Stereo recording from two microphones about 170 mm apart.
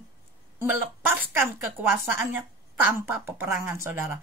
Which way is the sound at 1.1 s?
15° right (ahead or behind).